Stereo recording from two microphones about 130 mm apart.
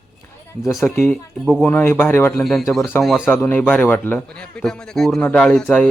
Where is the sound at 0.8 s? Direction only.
20° left (ahead or behind).